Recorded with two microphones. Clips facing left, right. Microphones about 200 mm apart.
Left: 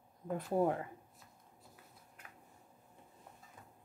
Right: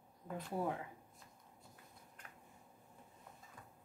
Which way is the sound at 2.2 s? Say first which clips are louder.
Left 2 dB; 5° left (ahead or behind).